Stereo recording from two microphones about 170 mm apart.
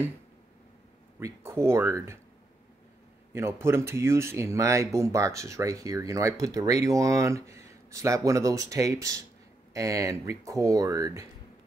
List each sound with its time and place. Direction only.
1.2 s speech: 15° right (ahead or behind)
3.3 s speech: 15° right (ahead or behind)